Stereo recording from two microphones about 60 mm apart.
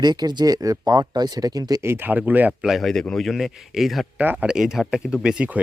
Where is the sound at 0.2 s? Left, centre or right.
Right.